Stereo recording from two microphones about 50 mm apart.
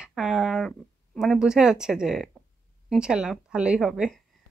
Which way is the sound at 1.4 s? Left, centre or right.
Centre.